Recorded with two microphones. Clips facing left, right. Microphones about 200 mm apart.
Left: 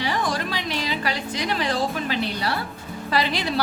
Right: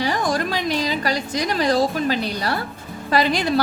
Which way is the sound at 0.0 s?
45° right (ahead or behind).